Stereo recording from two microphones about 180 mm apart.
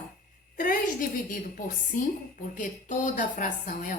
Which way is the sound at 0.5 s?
50° left (ahead or behind).